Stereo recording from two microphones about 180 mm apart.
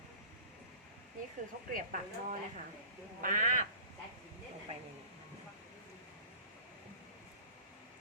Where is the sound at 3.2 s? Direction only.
45° right (ahead or behind).